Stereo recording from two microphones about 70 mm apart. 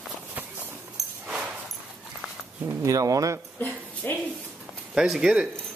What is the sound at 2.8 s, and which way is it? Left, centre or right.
Speech, right.